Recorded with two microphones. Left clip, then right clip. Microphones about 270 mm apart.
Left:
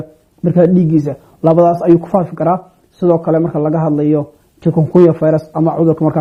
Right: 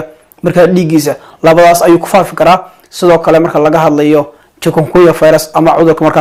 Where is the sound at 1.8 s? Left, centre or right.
Centre.